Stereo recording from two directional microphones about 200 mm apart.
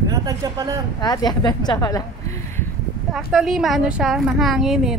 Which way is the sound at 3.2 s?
Centre (ahead or behind).